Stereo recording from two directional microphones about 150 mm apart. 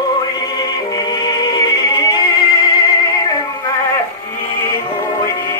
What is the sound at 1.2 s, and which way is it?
Music, 25° left (ahead or behind).